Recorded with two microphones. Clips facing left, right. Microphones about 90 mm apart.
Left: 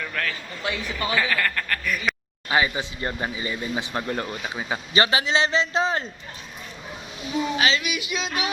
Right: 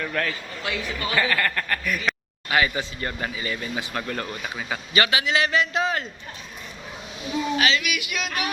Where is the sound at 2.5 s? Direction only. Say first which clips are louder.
Even; 20° left (ahead or behind).